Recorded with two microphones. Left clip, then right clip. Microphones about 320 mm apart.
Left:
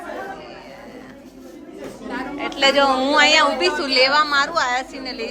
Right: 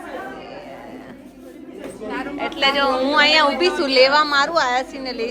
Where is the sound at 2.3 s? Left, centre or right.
Centre.